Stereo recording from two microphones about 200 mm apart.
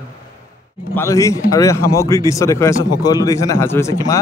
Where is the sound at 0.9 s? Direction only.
15° left (ahead or behind).